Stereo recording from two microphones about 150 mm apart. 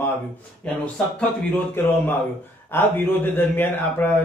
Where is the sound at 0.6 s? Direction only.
10° left (ahead or behind).